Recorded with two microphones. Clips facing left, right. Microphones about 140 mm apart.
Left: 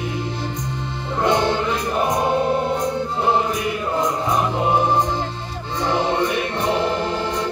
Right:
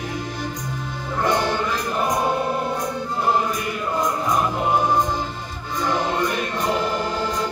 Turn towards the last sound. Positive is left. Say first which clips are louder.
# left 1 dB
turn(degrees=25)  # may be behind; listen again after turning